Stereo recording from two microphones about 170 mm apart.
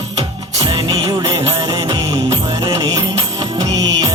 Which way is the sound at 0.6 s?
30° right (ahead or behind).